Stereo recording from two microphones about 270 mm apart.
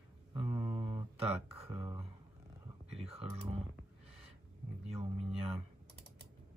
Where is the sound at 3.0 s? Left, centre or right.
Right.